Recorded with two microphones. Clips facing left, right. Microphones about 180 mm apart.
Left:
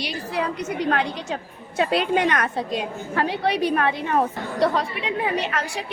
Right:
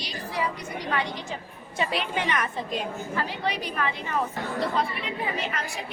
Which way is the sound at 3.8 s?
60° left (ahead or behind).